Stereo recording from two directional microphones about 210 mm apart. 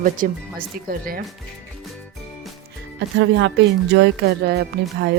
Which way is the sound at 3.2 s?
60° right (ahead or behind).